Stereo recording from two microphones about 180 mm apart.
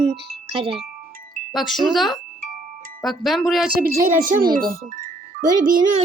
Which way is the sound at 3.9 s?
45° right (ahead or behind).